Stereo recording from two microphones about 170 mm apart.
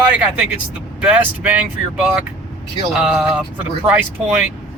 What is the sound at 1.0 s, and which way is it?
Speech, 10° right (ahead or behind).